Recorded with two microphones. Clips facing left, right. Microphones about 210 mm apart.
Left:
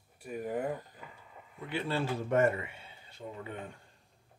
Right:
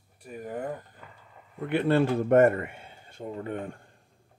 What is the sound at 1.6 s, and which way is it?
Speech, 60° right (ahead or behind).